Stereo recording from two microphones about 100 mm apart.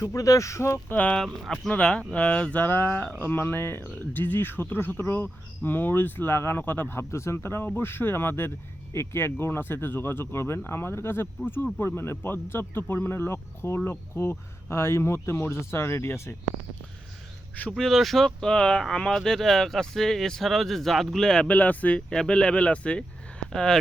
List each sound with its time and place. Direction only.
0.0 s speech: 35° left (ahead or behind)
0.9 s speech: 10° left (ahead or behind)
17.6 s speech: 5° left (ahead or behind)